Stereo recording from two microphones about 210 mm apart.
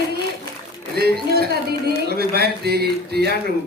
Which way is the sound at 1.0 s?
45° right (ahead or behind).